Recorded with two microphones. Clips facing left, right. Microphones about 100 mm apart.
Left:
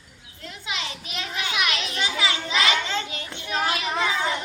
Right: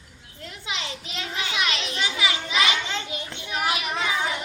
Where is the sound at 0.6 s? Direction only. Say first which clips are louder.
Even; 25° right (ahead or behind).